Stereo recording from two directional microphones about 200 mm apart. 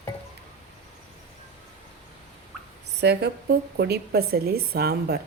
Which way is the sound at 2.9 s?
55° right (ahead or behind).